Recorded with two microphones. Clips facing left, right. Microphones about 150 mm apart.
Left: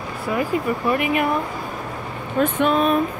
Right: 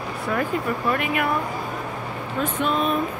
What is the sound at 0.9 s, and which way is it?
Speech, 20° left (ahead or behind).